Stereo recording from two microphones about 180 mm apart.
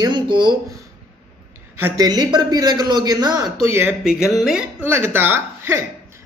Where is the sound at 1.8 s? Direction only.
20° right (ahead or behind); by 4.6 s centre (ahead or behind).